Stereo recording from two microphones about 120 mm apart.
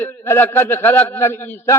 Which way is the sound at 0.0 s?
20° left (ahead or behind).